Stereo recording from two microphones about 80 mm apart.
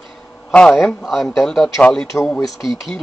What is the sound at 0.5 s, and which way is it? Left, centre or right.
Speech, centre.